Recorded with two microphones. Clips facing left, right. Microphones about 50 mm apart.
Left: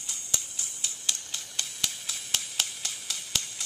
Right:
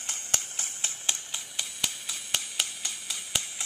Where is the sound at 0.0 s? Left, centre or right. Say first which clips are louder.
Right 3 dB; right.